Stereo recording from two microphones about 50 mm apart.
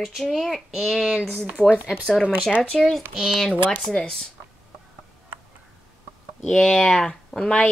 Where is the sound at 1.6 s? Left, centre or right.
Centre.